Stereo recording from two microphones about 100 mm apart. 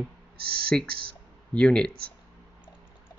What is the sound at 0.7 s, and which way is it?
Speech, 5° left (ahead or behind).